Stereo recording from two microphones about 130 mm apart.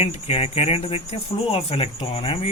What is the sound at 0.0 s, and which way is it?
Speech, 50° left (ahead or behind).